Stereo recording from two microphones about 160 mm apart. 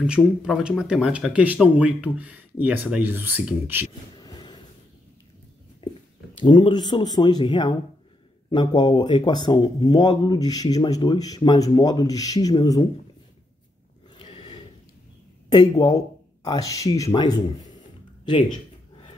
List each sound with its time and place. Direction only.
0.0 s speech: 5° right (ahead or behind)
4.2 s vehicle: 25° left (ahead or behind)
6.3 s speech: 30° left (ahead or behind)
14.1 s a sound: 35° left (ahead or behind)
15.5 s speech: 25° left (ahead or behind)